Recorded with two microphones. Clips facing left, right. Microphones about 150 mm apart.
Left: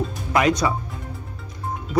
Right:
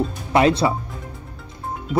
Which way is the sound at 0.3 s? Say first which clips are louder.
Right 3 dB; 30° right (ahead or behind).